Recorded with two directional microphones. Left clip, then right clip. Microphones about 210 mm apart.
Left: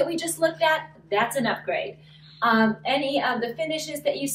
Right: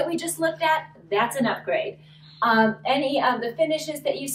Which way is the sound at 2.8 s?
15° right (ahead or behind).